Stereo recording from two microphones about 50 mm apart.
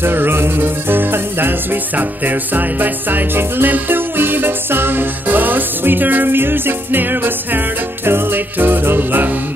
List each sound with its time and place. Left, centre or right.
0.0 s music: right